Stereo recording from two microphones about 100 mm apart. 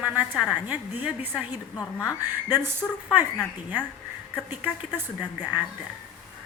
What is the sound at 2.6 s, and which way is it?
Speech, 25° right (ahead or behind).